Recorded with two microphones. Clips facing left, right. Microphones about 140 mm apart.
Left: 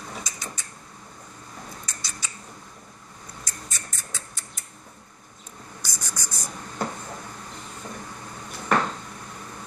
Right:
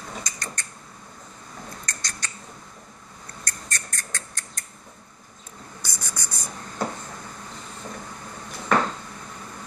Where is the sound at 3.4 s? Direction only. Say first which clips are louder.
Right 6 dB; 5° left (ahead or behind).